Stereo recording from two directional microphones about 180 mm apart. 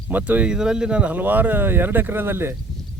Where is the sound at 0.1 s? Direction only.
10° right (ahead or behind).